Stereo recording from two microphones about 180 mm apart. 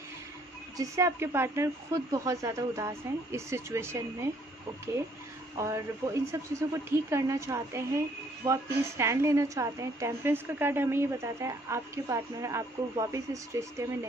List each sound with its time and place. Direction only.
0.7 s a woman's voice: 15° right (ahead or behind)
5.6 s a woman's voice: 15° right (ahead or behind)